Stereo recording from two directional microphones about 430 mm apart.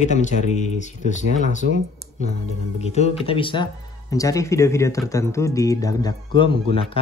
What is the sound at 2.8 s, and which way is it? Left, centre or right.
Speech, centre.